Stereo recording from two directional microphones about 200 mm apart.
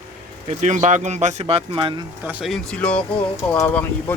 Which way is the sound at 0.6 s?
35° right (ahead or behind).